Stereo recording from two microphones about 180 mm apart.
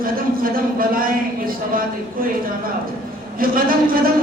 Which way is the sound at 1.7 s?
50° right (ahead or behind).